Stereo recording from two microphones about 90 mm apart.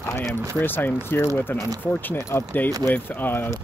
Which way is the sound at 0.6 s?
20° left (ahead or behind).